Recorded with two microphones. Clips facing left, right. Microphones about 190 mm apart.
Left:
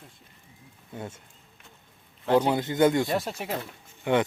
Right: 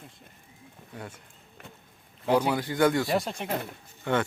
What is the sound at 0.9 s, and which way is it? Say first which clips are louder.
Speech: left 4 dB; 25° left (ahead or behind).